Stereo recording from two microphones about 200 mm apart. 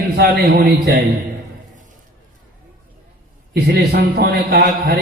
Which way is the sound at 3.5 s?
55° right (ahead or behind).